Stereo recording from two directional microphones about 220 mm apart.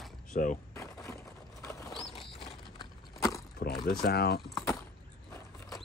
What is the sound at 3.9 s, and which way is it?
Speech, 45° left (ahead or behind).